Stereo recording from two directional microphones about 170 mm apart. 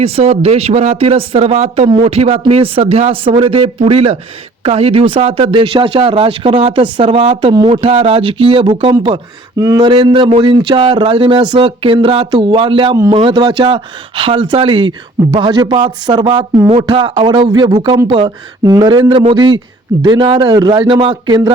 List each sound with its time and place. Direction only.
0.0 s speech: 35° right (ahead or behind)